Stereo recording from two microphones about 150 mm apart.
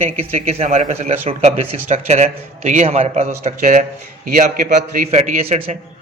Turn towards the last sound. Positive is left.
turn(degrees=-45)  # may be behind; listen again after turning